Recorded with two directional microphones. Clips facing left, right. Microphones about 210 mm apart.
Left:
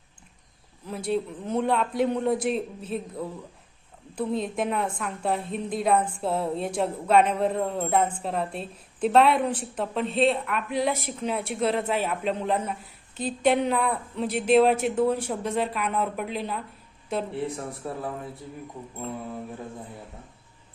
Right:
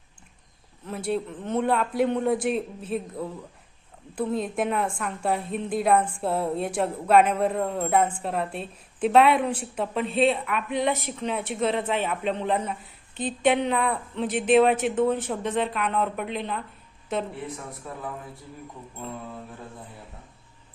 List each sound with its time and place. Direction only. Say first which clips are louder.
0.9 s a woman's voice: even; centre (ahead or behind)
17.4 s a man's voice: left 5 dB; 30° left (ahead or behind)